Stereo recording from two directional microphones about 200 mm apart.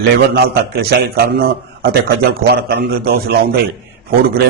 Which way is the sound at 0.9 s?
50° right (ahead or behind).